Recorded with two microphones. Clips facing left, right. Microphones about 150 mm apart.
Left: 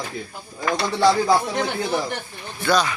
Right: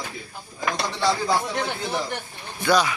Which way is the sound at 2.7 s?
10° right (ahead or behind).